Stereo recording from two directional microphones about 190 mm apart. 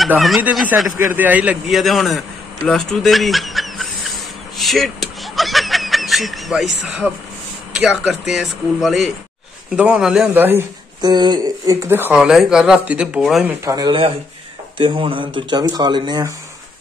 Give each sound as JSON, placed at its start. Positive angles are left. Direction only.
{"t": 0.0, "sound": "a man's voice", "side_deg": 0}
{"t": 11.0, "sound": "speech", "side_deg": -20}
{"t": 13.7, "sound": "speech", "side_deg": -20}